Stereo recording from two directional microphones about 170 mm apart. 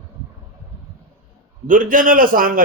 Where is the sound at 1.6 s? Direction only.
55° right (ahead or behind).